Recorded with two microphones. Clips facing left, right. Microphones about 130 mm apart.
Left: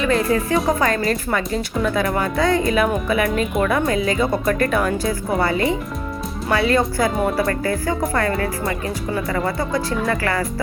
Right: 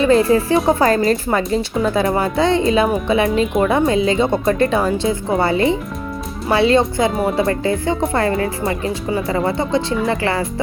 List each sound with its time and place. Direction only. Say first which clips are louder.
0.0 s speech: right 5 dB; 30° right (ahead or behind)